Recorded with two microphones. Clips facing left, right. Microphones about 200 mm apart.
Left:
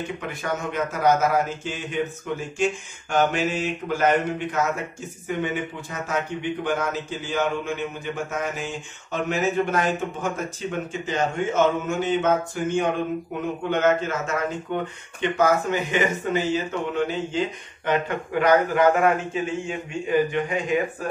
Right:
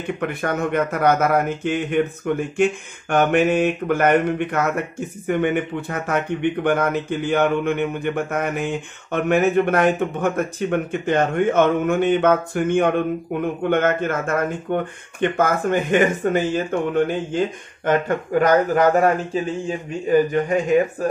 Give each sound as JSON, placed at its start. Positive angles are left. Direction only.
{"t": 0.2, "sound": "a man's voice", "side_deg": -60}